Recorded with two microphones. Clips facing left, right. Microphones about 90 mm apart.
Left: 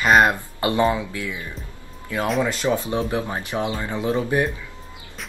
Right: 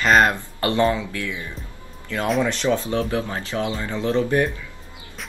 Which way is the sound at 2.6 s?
15° left (ahead or behind).